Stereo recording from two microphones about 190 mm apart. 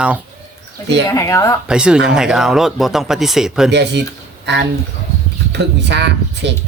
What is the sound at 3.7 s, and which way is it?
Speech, 65° right (ahead or behind).